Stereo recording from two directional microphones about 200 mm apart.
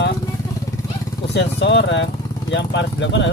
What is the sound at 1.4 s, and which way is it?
Speech, 60° left (ahead or behind).